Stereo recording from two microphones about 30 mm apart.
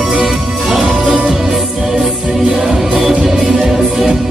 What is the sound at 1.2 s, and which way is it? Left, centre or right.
Music, centre.